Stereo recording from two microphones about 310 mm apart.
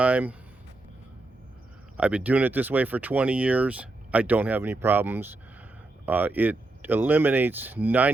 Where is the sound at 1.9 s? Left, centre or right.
Centre.